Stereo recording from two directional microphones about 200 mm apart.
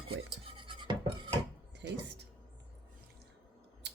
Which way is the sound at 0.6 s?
25° right (ahead or behind).